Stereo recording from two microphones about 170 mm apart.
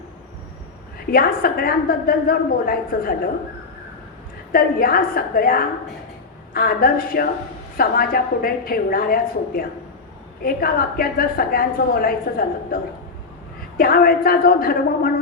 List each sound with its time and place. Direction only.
1.1 s a woman's voice: 60° left (ahead or behind)
4.5 s a woman's voice: 60° left (ahead or behind)